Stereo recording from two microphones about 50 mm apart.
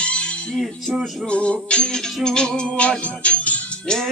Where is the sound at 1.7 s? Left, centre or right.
Left.